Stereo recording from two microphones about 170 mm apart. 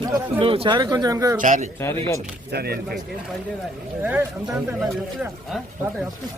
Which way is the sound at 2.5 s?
70° right (ahead or behind).